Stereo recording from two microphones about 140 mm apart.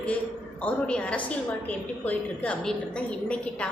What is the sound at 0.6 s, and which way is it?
A woman's voice, 10° left (ahead or behind).